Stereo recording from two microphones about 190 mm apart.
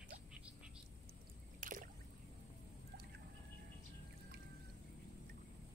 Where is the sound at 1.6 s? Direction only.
45° right (ahead or behind).